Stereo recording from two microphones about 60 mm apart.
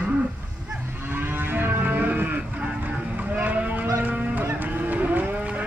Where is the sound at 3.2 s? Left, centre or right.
Right.